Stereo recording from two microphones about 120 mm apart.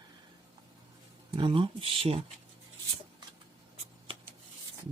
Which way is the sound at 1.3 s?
45° right (ahead or behind).